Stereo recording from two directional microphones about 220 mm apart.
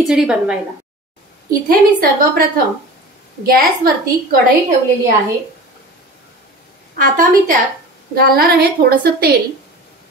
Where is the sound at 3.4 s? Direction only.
40° right (ahead or behind).